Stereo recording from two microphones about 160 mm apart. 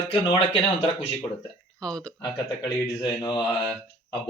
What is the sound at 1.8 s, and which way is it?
Speech, 5° left (ahead or behind).